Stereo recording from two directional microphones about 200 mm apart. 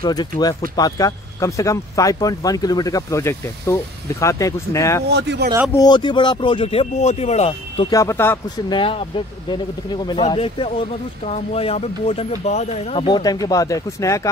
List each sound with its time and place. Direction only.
0.0 s speech: 20° left (ahead or behind)
5.1 s speech: 60° right (ahead or behind)
5.7 s speech: 20° left (ahead or behind)
8.7 s speech: 25° left (ahead or behind)